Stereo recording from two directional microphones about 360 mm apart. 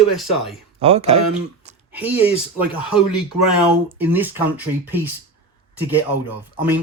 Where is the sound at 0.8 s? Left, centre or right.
Centre.